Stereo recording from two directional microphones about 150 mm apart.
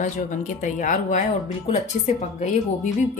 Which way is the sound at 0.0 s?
55° left (ahead or behind).